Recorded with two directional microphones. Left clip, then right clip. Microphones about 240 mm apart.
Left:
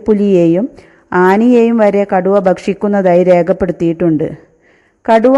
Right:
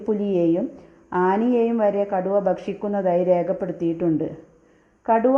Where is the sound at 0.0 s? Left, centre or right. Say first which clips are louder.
Left 11 dB; left.